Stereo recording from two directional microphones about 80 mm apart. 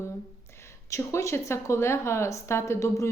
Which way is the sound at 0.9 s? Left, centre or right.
Left.